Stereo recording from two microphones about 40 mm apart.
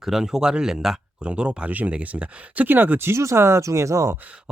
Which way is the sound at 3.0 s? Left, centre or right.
Right.